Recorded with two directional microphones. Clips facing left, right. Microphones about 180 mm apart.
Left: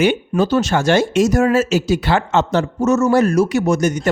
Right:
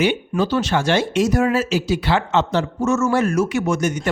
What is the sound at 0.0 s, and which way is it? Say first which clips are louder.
Speech: left 3 dB; 45° left (ahead or behind).